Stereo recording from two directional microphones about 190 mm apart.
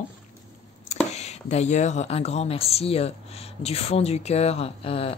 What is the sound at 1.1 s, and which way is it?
Speech, 35° left (ahead or behind).